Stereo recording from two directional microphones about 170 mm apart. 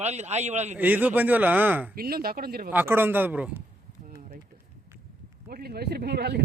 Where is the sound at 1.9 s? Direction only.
60° right (ahead or behind).